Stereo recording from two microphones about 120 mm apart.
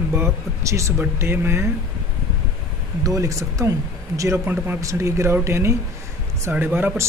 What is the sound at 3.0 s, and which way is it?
Speech, 30° right (ahead or behind).